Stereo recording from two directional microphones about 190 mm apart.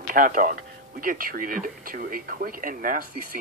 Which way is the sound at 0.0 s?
45° right (ahead or behind).